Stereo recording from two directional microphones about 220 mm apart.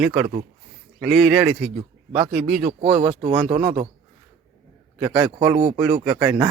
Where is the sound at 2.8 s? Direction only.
25° right (ahead or behind).